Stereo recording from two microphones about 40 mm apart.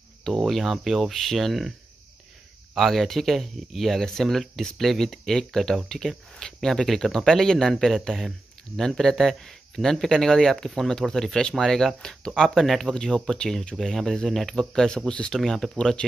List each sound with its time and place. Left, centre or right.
0.3 s speech: centre
2.7 s speech: centre
12.8 s speech: centre
15.3 s speech: centre